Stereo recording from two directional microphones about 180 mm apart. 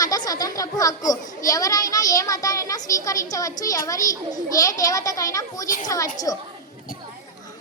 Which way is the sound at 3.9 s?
20° left (ahead or behind).